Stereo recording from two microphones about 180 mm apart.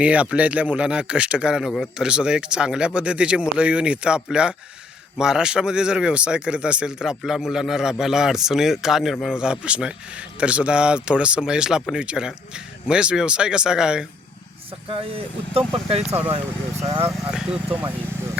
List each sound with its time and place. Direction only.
0.0 s a man's voice: 5° right (ahead or behind)
14.8 s speech: 30° right (ahead or behind)
16.0 s speech: 10° right (ahead or behind)
16.8 s speech: 35° right (ahead or behind)
17.3 s speech: 5° right (ahead or behind)